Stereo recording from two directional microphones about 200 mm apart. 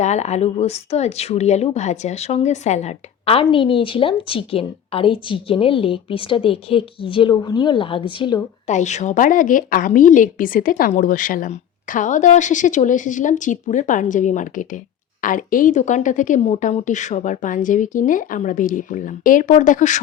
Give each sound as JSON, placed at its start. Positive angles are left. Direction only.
{"t": 0.0, "sound": "speech", "side_deg": 35}
{"t": 8.6, "sound": "a woman's voice", "side_deg": 35}